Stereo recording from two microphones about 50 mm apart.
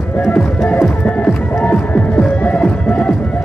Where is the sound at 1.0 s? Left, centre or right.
Left.